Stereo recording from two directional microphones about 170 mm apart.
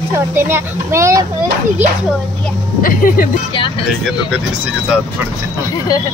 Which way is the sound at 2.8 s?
55° left (ahead or behind).